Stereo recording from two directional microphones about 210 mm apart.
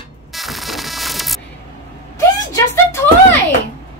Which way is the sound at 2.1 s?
15° left (ahead or behind).